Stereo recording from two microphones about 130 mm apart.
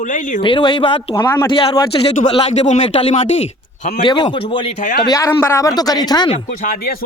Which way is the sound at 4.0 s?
40° left (ahead or behind).